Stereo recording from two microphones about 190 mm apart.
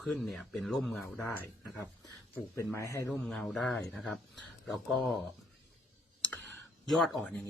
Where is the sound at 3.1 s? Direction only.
Centre (ahead or behind).